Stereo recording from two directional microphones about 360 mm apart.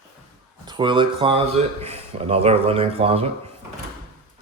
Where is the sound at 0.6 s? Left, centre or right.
Centre.